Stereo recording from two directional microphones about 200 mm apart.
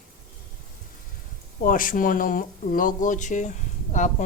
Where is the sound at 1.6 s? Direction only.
45° left (ahead or behind).